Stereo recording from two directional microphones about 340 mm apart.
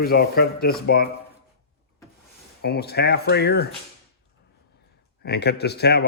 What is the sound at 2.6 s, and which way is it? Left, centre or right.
Speech, left.